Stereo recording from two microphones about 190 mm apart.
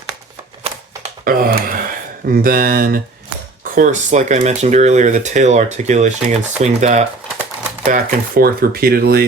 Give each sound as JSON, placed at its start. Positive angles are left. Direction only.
{"t": 1.2, "sound": "a sound", "side_deg": -50}
{"t": 2.3, "sound": "speech", "side_deg": -50}
{"t": 3.8, "sound": "speech", "side_deg": -40}
{"t": 7.9, "sound": "speech", "side_deg": -45}